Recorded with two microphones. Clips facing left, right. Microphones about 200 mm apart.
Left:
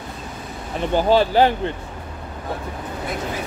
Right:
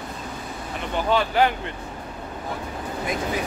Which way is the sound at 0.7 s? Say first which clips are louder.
Left 6 dB; 35° left (ahead or behind).